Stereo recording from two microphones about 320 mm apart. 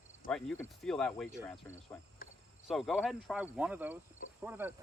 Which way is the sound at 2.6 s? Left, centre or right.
Centre.